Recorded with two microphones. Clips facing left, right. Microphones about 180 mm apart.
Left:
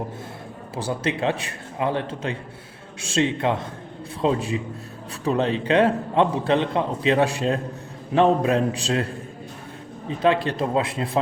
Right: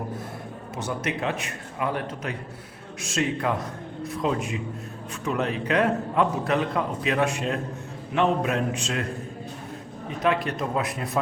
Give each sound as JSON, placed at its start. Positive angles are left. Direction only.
{"t": 0.8, "sound": "a man's voice", "side_deg": 30}